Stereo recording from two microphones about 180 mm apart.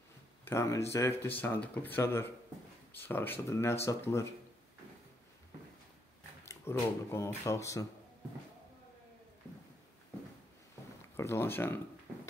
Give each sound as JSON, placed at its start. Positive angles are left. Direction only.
{"t": 0.5, "sound": "speech", "side_deg": 15}
{"t": 6.4, "sound": "speech", "side_deg": 15}
{"t": 11.1, "sound": "speech", "side_deg": 15}